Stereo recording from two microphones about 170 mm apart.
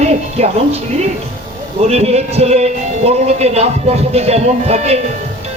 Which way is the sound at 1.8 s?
40° right (ahead or behind).